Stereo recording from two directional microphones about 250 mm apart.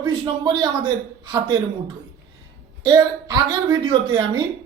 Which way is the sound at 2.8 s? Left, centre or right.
Centre.